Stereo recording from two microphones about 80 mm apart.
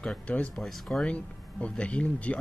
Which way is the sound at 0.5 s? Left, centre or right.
Centre.